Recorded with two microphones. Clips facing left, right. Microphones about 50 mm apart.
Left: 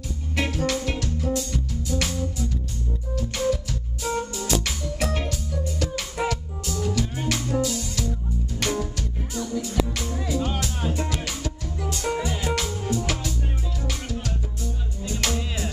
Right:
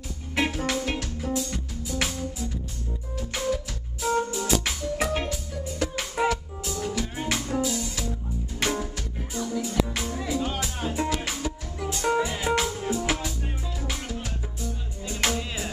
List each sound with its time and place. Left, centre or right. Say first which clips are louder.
0.4 s music: left 1 dB; centre